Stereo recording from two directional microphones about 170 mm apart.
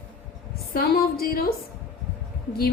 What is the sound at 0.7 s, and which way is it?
Speech, 60° left (ahead or behind).